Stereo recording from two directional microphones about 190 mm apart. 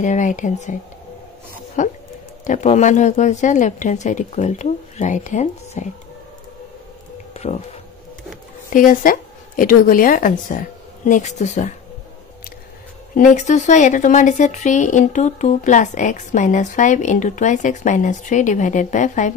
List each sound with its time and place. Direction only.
0.0 s speech: 40° left (ahead or behind)
1.8 s speech: 40° left (ahead or behind)
7.3 s speech: 35° left (ahead or behind)
8.7 s a woman's voice: 45° left (ahead or behind)
13.1 s speech: 45° left (ahead or behind)